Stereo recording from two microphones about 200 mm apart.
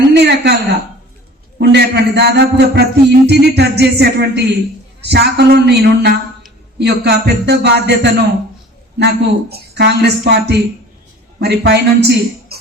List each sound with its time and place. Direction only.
0.1 s a woman's voice: 55° right (ahead or behind)
1.5 s music: 55° right (ahead or behind)